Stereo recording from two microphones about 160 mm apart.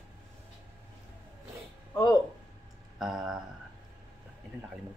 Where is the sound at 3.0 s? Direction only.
Centre (ahead or behind).